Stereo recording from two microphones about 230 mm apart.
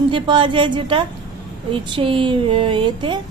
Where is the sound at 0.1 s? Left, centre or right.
Right.